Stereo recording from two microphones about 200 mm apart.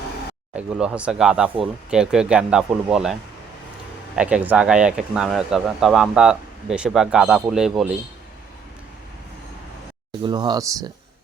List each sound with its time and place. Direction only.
0.5 s speech: 5° right (ahead or behind)
10.2 s speech: 20° right (ahead or behind)